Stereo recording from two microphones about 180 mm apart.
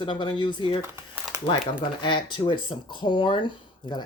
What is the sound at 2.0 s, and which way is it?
Speech, 25° left (ahead or behind).